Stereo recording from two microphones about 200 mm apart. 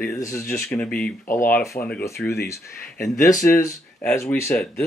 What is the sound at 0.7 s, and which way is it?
Speech, 5° left (ahead or behind).